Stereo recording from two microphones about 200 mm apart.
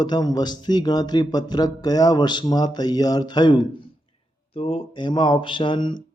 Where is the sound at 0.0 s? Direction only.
20° left (ahead or behind).